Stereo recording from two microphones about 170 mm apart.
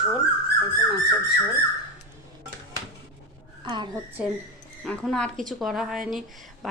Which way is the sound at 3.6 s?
30° right (ahead or behind).